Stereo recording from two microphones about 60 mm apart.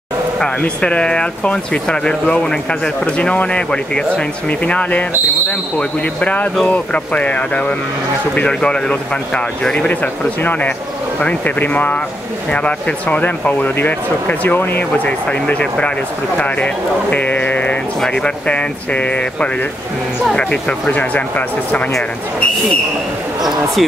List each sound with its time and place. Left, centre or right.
0.4 s speech: centre; by 14.9 s left
15.0 s speech: left
23.4 s speech: centre